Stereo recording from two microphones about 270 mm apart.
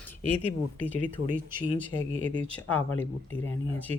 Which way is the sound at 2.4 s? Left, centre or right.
Centre.